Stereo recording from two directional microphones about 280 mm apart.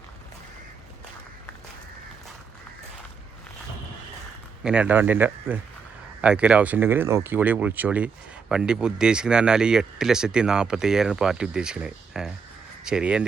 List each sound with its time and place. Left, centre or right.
4.6 s speech: centre